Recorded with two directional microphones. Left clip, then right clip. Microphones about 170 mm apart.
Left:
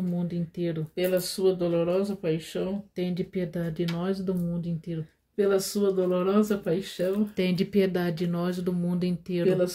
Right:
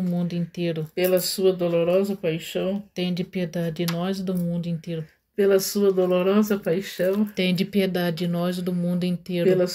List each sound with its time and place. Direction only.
0.2 s speech: 25° left (ahead or behind)